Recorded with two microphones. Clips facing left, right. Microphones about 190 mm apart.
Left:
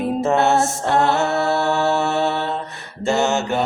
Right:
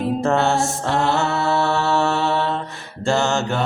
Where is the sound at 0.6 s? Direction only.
55° left (ahead or behind).